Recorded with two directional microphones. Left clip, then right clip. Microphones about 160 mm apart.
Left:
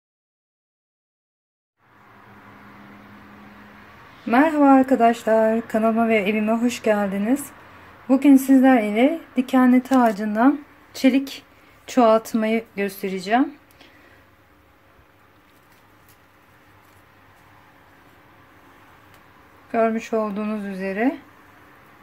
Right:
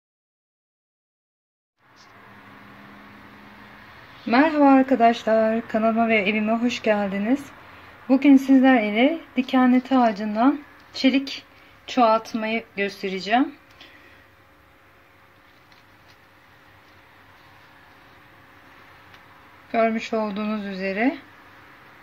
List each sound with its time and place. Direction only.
4.3 s a woman's voice: 5° left (ahead or behind)
11.9 s a woman's voice: 25° left (ahead or behind); by 13.8 s 10° left (ahead or behind)
19.7 s speech: 5° left (ahead or behind)